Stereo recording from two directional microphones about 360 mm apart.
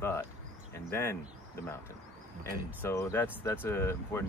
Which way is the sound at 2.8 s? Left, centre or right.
Centre.